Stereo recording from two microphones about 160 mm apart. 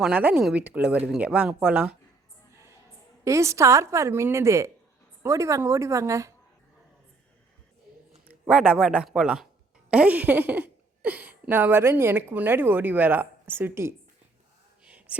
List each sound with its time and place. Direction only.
0.0 s speech: 10° right (ahead or behind)
3.2 s a woman's voice: 20° right (ahead or behind)
8.3 s speech: 10° right (ahead or behind)
14.8 s a sound: 10° right (ahead or behind)